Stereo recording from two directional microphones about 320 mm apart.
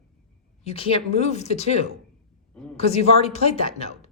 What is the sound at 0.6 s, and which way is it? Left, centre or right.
Speech, centre.